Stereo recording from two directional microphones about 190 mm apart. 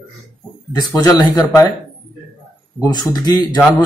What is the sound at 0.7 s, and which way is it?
A man's voice, 20° left (ahead or behind).